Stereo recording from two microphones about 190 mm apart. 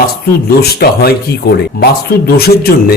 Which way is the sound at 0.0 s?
55° left (ahead or behind).